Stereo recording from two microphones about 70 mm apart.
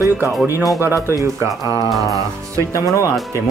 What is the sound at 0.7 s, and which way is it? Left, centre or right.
Speech, right.